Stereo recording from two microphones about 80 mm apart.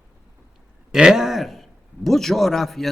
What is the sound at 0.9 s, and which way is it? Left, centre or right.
A man's voice, centre.